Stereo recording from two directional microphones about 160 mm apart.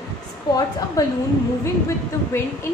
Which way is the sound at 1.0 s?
20° left (ahead or behind).